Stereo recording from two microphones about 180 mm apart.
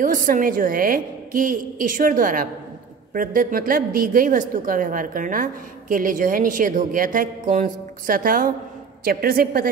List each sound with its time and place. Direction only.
0.0 s a woman's voice: 50° right (ahead or behind)